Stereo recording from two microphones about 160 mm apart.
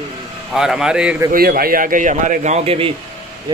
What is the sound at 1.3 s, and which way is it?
A man's voice, 65° right (ahead or behind).